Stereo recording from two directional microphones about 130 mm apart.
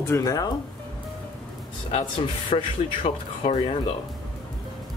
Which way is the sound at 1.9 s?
40° left (ahead or behind).